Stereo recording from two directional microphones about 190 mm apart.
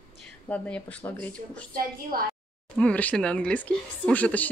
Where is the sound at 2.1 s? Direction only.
50° right (ahead or behind).